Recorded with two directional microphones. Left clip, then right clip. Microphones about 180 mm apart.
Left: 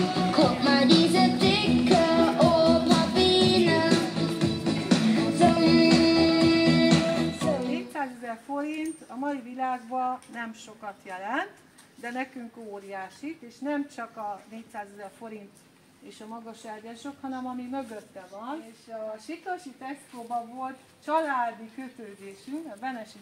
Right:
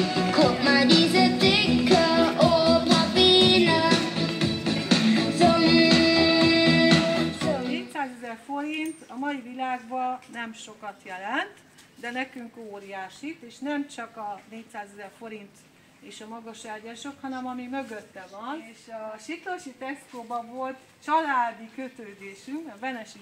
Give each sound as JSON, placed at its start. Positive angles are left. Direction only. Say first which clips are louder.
{"t": 0.0, "sound": "music", "louder": "right 2 dB", "side_deg": -10}
{"t": 12.0, "sound": "speech", "louder": "right 2 dB", "side_deg": 15}
{"t": 20.6, "sound": "speech", "louder": "right 2 dB", "side_deg": 20}
{"t": 22.8, "sound": "speech", "louder": "right 2 dB", "side_deg": 20}